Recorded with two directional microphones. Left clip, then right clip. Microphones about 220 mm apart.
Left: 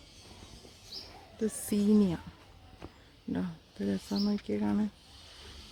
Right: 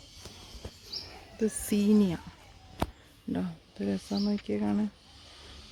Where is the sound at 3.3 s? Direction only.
5° right (ahead or behind).